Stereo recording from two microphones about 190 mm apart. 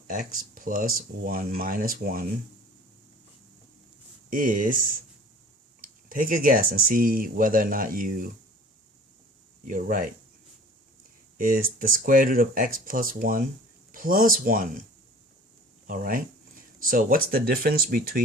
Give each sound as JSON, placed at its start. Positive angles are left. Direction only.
{"t": 0.1, "sound": "speech", "side_deg": -45}
{"t": 4.3, "sound": "speech", "side_deg": -45}
{"t": 5.8, "sound": "speech", "side_deg": -45}
{"t": 9.6, "sound": "speech", "side_deg": -45}
{"t": 11.3, "sound": "speech", "side_deg": -50}
{"t": 15.9, "sound": "speech", "side_deg": -50}